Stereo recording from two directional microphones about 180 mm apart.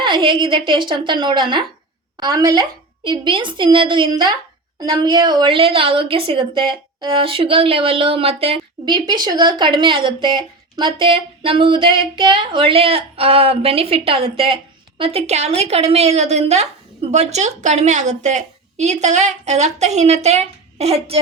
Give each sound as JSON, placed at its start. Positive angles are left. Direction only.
{"t": 0.0, "sound": "a woman's voice", "side_deg": -25}